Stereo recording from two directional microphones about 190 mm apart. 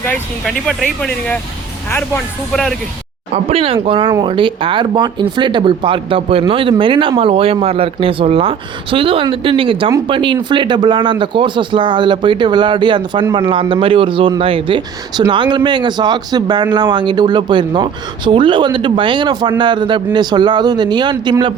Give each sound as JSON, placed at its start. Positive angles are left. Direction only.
{"t": 0.0, "sound": "speech", "side_deg": 5}
{"t": 1.9, "sound": "speech", "side_deg": 10}
{"t": 3.3, "sound": "speech", "side_deg": -30}